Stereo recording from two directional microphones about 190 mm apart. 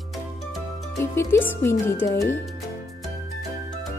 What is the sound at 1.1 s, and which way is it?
Speech, 15° left (ahead or behind).